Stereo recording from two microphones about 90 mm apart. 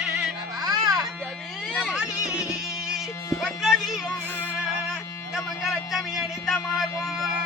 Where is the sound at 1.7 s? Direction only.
5° right (ahead or behind).